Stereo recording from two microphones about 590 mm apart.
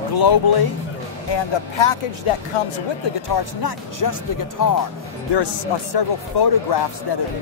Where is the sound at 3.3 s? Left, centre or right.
Left.